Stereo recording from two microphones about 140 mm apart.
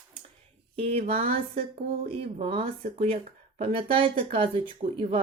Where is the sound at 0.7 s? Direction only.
45° right (ahead or behind).